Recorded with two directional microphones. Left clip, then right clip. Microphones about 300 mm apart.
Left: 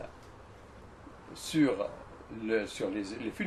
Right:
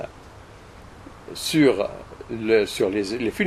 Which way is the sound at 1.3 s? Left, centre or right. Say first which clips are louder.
Right 11 dB; right.